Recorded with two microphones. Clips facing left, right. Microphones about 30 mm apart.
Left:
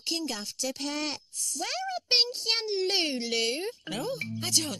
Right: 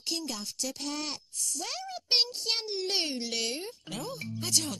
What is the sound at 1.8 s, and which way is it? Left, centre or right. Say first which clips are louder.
Speech: left 2 dB; left.